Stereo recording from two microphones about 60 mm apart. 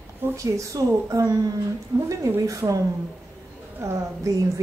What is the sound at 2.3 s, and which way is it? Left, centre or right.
Speech, right.